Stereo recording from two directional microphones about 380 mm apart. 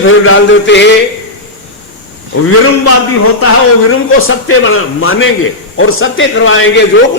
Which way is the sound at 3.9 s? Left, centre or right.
Left.